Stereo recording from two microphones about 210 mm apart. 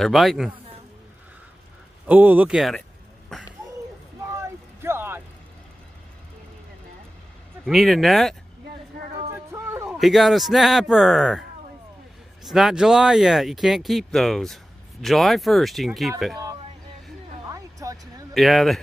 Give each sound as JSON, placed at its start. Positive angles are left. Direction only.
{"t": 0.0, "sound": "speech", "side_deg": 0}
{"t": 2.0, "sound": "speech", "side_deg": -10}
{"t": 4.4, "sound": "a sound", "side_deg": -10}
{"t": 7.6, "sound": "speech", "side_deg": 0}
{"t": 9.8, "sound": "speech", "side_deg": 0}
{"t": 12.4, "sound": "speech", "side_deg": 0}
{"t": 17.5, "sound": "music", "side_deg": -15}
{"t": 18.3, "sound": "speech", "side_deg": 0}